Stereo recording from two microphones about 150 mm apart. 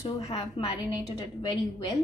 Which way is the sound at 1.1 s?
30° left (ahead or behind).